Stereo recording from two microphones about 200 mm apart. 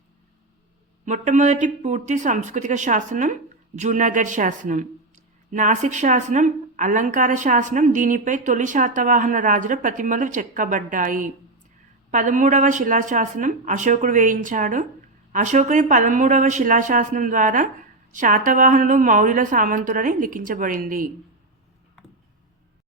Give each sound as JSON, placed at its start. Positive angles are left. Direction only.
{"t": 1.0, "sound": "speech", "side_deg": -35}